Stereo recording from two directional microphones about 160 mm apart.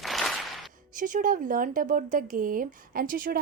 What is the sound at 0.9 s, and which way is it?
A woman's voice, 55° right (ahead or behind).